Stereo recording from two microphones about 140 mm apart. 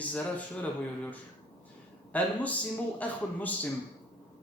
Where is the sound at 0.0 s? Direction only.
10° left (ahead or behind).